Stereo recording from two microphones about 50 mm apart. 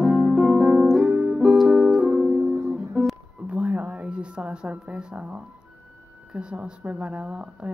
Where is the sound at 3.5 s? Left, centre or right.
Right.